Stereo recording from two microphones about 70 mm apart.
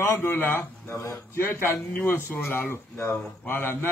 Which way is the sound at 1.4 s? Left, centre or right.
Left.